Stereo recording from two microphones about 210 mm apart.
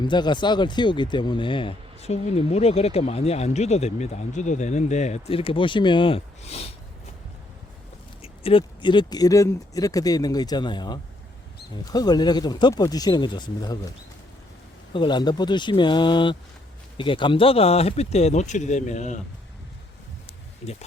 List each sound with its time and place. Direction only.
0.0 s speech: 20° left (ahead or behind)
8.2 s speech: 25° left (ahead or behind)
14.9 s speech: 20° left (ahead or behind)